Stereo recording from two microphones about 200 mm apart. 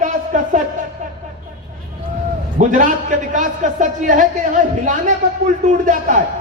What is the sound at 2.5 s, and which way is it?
A man's voice, 40° right (ahead or behind).